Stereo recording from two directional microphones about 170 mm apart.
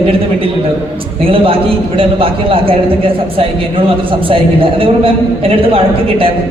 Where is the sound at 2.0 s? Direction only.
30° right (ahead or behind).